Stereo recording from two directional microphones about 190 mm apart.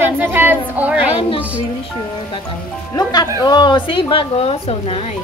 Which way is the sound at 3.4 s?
25° left (ahead or behind).